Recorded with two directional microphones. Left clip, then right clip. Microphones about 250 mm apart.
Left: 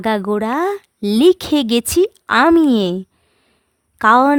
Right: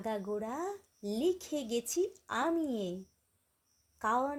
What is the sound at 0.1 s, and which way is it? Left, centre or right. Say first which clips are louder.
Speech: left 19 dB; left.